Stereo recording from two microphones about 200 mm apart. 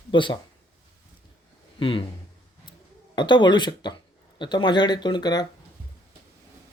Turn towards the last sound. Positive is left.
turn(degrees=20)  # may be behind; listen again after turning